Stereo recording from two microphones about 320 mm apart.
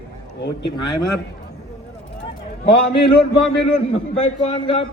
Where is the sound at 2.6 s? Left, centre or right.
Centre.